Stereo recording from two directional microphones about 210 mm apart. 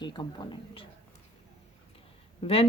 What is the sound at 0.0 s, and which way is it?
Speech, 20° left (ahead or behind).